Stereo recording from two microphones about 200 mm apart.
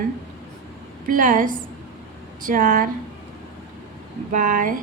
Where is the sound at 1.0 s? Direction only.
40° right (ahead or behind).